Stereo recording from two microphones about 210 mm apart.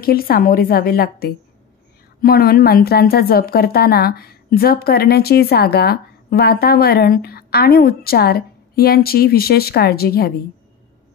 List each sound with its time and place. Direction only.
0.0 s a woman's voice: 45° left (ahead or behind)